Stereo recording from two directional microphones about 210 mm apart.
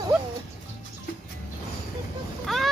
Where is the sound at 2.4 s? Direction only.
Centre (ahead or behind).